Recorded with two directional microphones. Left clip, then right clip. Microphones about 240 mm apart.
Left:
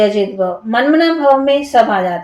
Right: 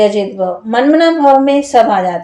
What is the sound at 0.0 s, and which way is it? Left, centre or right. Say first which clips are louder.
A woman's voice: right 1 dB; right.